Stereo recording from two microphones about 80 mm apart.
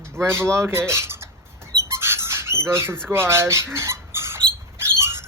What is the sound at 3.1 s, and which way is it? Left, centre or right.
Speech, right.